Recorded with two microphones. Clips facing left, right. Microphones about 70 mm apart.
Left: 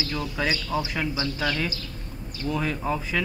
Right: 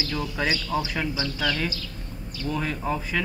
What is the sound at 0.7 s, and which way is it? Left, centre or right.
Speech, centre.